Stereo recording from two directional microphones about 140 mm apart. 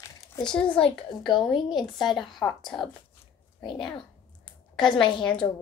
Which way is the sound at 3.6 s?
35° left (ahead or behind).